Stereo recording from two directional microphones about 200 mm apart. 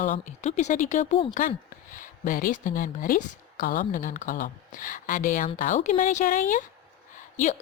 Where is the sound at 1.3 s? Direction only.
45° left (ahead or behind).